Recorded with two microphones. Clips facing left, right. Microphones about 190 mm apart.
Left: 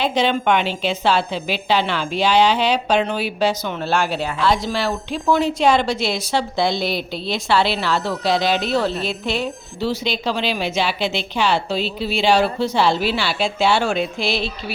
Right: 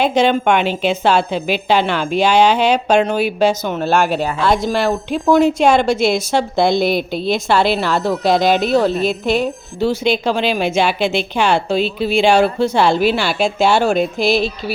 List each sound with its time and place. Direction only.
0.0 s a woman's voice: 50° right (ahead or behind)